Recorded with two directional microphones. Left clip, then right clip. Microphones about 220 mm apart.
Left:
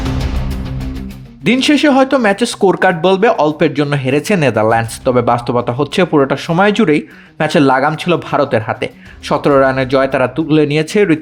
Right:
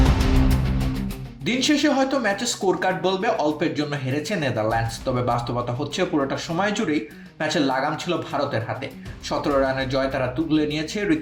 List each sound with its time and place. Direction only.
1.5 s speech: 50° left (ahead or behind)